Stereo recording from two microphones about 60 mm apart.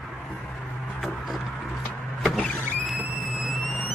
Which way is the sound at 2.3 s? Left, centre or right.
Left.